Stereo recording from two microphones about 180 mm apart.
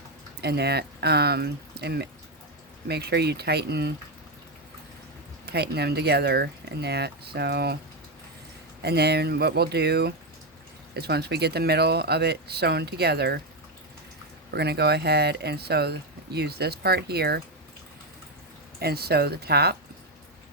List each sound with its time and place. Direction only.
0.4 s speech: 65° right (ahead or behind)
5.5 s speech: 65° right (ahead or behind)
8.8 s speech: 65° right (ahead or behind)
14.5 s speech: 65° right (ahead or behind)
18.8 s speech: 60° right (ahead or behind)